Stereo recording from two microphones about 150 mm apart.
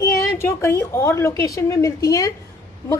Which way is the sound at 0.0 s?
20° left (ahead or behind).